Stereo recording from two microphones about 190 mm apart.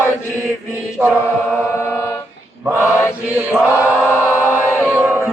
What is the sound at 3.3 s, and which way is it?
Chant, 10° right (ahead or behind).